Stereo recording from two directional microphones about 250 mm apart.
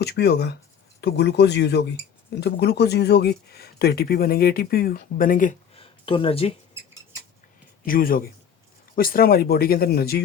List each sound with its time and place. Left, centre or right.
0.0 s speech: left
7.9 s speech: left